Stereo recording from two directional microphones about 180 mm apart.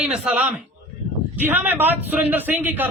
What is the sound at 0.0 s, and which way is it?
A man's voice, 5° right (ahead or behind).